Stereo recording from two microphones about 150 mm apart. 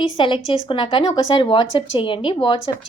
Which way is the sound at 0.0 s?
35° left (ahead or behind).